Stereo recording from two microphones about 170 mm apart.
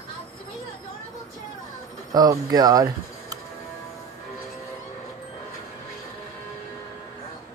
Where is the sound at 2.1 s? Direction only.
20° right (ahead or behind).